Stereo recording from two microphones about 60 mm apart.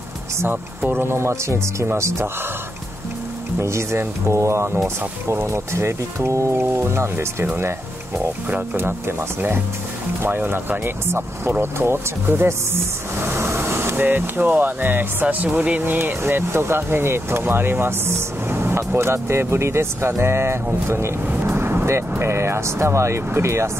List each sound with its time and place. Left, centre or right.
0.5 s speech: right
3.5 s speech: right
8.5 s speech: right
8.8 s speech: right
16.0 s speech: right
21.5 s vehicle: right
22.2 s speech: right